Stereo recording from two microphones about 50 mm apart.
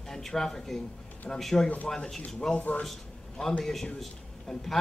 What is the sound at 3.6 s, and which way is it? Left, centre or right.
A man's voice, centre.